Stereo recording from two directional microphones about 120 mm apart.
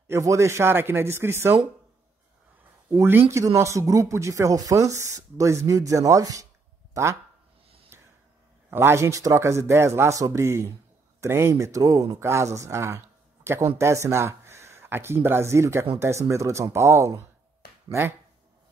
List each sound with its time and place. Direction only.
0.1 s speech: 25° right (ahead or behind)
2.9 s speech: 20° right (ahead or behind)
6.9 s a sound: 25° right (ahead or behind)
8.6 s speech: 20° right (ahead or behind)